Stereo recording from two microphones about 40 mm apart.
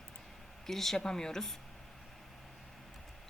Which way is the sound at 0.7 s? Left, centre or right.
Centre.